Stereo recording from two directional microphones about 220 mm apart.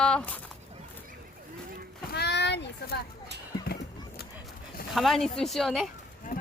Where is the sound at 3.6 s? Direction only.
45° left (ahead or behind).